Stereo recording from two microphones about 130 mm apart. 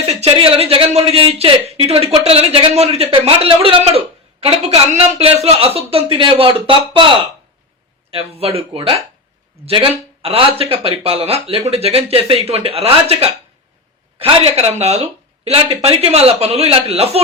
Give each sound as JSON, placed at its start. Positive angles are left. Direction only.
{"t": 0.0, "sound": "speech", "side_deg": -50}